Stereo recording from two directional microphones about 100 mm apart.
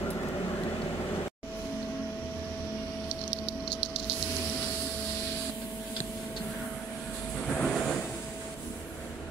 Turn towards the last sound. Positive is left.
turn(degrees=5)  # may be behind; listen again after turning